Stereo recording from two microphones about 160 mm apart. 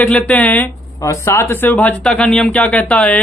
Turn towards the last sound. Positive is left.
turn(degrees=10)  # may be behind; listen again after turning